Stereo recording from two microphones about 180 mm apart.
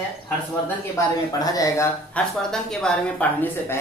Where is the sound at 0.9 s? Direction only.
20° left (ahead or behind).